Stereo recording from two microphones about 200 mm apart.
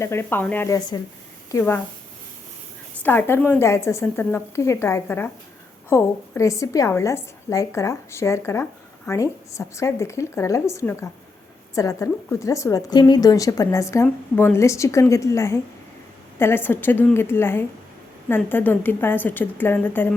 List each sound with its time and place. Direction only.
0.0 s a woman's voice: 10° left (ahead or behind)
3.0 s a woman's voice: 10° left (ahead or behind)